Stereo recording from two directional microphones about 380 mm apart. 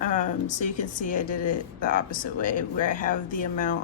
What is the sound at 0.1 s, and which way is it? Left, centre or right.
Speech, centre.